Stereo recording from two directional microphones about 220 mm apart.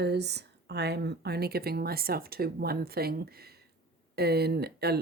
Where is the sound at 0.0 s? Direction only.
50° right (ahead or behind).